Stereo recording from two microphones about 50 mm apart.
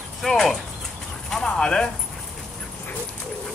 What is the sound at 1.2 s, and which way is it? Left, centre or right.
Clip-clop, centre.